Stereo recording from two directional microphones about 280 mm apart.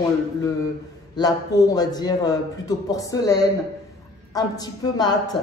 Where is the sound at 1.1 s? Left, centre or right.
Centre.